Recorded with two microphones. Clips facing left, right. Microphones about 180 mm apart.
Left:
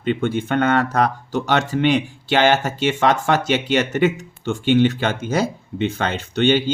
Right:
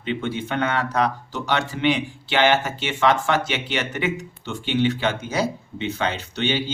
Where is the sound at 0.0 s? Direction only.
50° left (ahead or behind).